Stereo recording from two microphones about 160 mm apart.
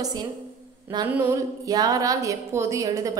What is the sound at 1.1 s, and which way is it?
Speech, 10° right (ahead or behind).